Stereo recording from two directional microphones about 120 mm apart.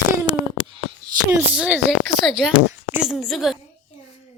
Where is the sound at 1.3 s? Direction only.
20° right (ahead or behind); by 3.6 s centre (ahead or behind).